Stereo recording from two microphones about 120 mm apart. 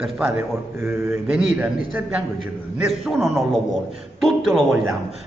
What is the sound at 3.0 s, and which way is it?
A man's voice, centre (ahead or behind).